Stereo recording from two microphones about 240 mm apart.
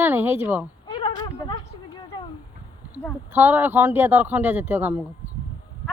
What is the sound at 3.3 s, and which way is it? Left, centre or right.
A man's voice, centre.